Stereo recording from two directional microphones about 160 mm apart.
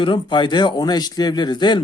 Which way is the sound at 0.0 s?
30° left (ahead or behind).